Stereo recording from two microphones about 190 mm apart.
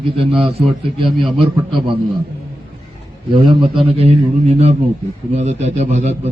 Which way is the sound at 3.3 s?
30° right (ahead or behind).